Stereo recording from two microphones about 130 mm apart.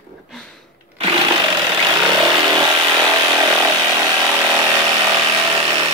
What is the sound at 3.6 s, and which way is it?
Chainsaw, 20° right (ahead or behind).